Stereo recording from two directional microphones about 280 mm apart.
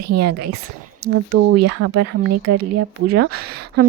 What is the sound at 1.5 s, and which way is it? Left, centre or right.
Speech, right.